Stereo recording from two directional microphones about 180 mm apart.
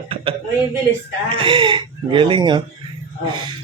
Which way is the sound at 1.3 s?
30° right (ahead or behind).